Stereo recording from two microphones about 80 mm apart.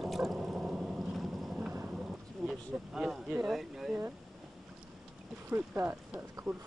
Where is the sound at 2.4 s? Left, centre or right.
Centre.